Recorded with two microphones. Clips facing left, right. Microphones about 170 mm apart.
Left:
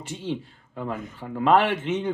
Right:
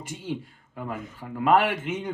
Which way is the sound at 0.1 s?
10° right (ahead or behind).